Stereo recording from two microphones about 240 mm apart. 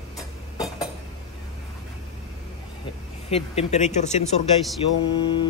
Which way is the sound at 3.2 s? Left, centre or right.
Left.